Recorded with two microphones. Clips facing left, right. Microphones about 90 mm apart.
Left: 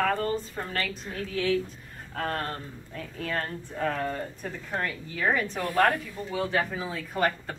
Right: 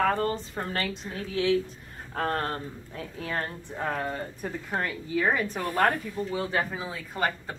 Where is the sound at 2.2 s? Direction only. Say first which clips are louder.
Right 2 dB; 30° right (ahead or behind).